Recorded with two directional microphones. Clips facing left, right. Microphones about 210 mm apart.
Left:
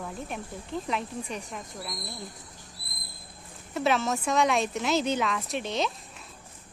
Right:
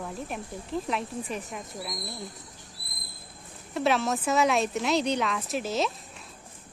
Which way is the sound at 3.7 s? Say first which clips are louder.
Right 1 dB; centre (ahead or behind).